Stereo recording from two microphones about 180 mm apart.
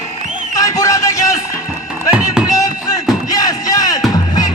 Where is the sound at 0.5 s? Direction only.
20° left (ahead or behind).